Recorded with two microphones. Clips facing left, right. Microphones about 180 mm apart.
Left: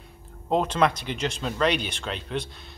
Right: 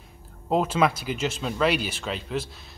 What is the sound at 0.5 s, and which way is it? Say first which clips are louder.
A man's voice: even; 5° right (ahead or behind).